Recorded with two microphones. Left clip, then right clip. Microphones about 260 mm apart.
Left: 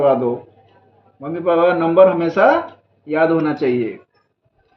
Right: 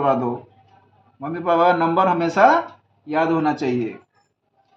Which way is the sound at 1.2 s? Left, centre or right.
Right.